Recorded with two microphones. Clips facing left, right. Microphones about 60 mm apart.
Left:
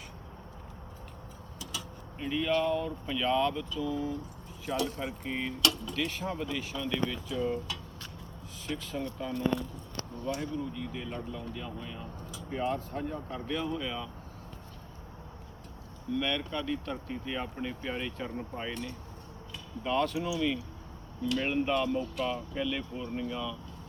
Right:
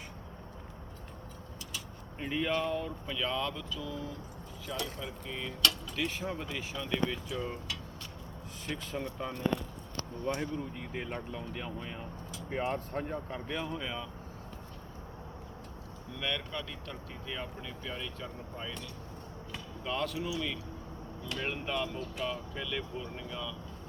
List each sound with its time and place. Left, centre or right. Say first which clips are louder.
2.1 s speech: left 3 dB; centre
4.6 s speech: left 6 dB; left
6.0 s speech: right 1 dB; centre
9.0 s speech: left 3 dB; centre
10.2 s speech: left 1 dB; right
13.3 s speech: left 3 dB; centre
16.1 s speech: left 5 dB; centre
17.7 s speech: left 5 dB; left
19.8 s speech: left 5 dB; centre